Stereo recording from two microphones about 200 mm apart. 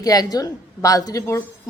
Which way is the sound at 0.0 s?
20° left (ahead or behind).